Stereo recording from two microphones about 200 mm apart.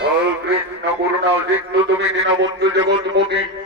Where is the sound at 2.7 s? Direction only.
60° right (ahead or behind).